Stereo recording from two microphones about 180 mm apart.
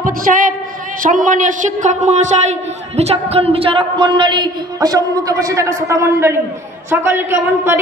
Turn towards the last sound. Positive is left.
turn(degrees=-15)  # may be behind; listen again after turning